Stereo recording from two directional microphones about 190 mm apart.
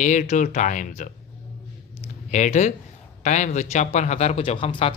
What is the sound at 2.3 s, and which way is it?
A man's voice, 40° left (ahead or behind).